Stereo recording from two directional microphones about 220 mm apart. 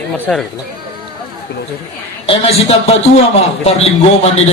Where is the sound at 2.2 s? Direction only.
25° left (ahead or behind).